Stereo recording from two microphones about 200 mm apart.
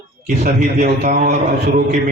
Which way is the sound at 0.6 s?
35° right (ahead or behind).